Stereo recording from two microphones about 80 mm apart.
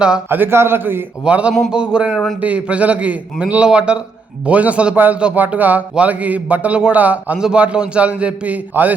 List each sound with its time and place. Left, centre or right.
0.3 s a man's voice: right
1.2 s a man's voice: centre
2.1 s a man's voice: centre
2.4 s a man's voice: centre